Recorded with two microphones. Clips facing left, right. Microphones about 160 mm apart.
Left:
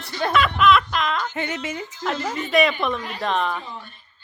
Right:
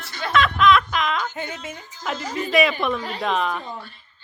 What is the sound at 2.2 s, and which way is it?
Speech, 40° right (ahead or behind).